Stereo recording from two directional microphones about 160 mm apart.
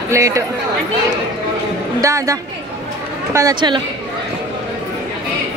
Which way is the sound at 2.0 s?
20° right (ahead or behind).